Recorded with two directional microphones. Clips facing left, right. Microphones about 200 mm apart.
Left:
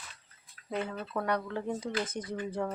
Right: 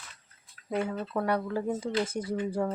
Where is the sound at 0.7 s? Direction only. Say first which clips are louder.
Right 4 dB; 10° right (ahead or behind).